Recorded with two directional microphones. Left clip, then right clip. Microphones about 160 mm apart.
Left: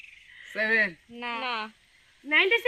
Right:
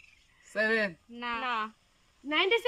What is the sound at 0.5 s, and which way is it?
Speech, 30° right (ahead or behind).